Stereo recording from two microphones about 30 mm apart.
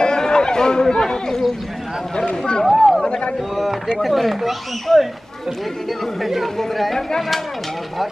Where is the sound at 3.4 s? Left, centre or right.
Centre.